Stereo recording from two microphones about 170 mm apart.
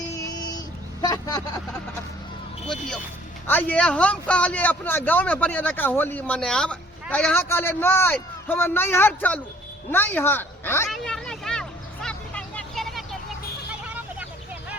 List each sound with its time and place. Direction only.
0.2 s vehicle: 20° left (ahead or behind)
1.0 s speech: 20° left (ahead or behind)
3.4 s a man's voice: 10° left (ahead or behind)
10.8 s vehicle: 5° left (ahead or behind)